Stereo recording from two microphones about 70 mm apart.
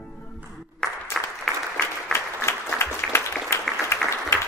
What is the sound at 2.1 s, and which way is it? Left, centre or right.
Applause, left.